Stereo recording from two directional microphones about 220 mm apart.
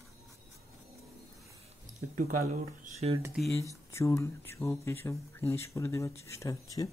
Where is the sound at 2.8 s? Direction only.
30° right (ahead or behind).